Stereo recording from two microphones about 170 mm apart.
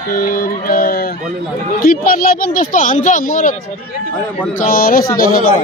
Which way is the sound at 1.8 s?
55° left (ahead or behind).